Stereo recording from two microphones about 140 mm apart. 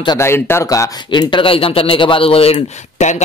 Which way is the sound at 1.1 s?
35° left (ahead or behind).